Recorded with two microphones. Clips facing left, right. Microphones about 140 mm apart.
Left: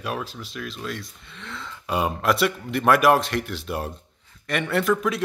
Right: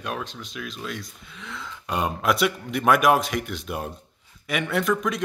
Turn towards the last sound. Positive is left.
turn(degrees=0)  # may be behind; listen again after turning